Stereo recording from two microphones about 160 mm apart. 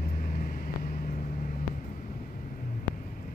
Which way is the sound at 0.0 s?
60° left (ahead or behind).